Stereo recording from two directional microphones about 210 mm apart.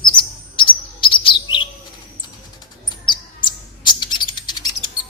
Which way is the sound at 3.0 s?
20° left (ahead or behind).